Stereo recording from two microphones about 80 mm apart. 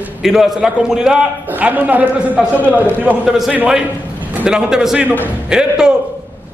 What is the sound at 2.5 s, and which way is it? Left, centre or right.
Speech, left.